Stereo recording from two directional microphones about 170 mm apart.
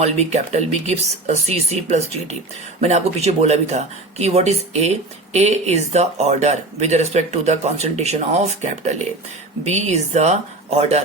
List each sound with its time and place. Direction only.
0.0 s speech: 40° right (ahead or behind)